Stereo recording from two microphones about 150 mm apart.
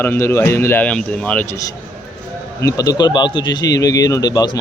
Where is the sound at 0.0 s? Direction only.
15° left (ahead or behind).